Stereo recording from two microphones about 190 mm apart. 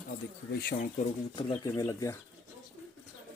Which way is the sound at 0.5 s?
50° left (ahead or behind).